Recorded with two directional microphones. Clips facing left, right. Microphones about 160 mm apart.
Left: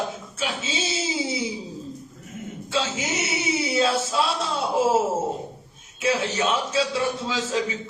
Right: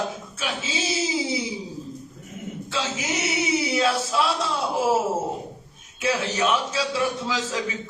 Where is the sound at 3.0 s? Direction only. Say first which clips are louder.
Right 1 dB; 25° left (ahead or behind).